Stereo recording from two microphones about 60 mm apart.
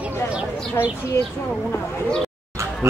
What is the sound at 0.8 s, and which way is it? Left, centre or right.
Speech, left.